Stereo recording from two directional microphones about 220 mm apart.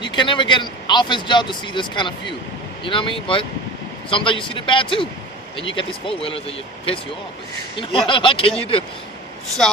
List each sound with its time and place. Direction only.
0.0 s speech: 20° left (ahead or behind)
8.0 s speech: 25° left (ahead or behind)
9.6 s speech: centre (ahead or behind)